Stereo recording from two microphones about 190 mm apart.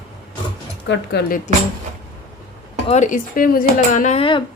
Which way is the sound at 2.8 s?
40° left (ahead or behind).